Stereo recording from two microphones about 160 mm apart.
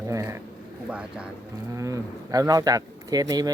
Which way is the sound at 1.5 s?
20° right (ahead or behind).